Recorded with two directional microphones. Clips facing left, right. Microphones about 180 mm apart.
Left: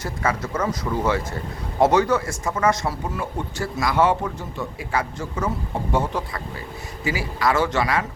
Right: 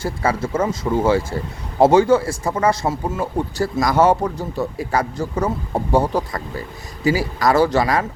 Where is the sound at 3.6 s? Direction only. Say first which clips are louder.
Right 4 dB; 40° right (ahead or behind).